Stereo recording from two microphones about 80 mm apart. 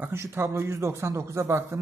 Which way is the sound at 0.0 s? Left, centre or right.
Right.